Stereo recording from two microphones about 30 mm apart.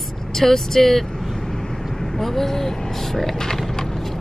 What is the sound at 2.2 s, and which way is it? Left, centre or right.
Speech, centre.